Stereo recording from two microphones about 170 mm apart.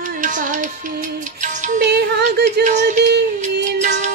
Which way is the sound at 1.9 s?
75° right (ahead or behind).